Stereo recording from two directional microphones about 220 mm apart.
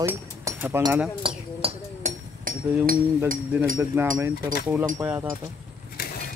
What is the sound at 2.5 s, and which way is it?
Chink, 40° right (ahead or behind).